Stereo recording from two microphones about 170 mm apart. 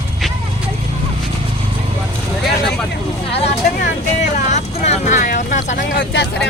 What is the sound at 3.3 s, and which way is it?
Vehicle, 40° left (ahead or behind).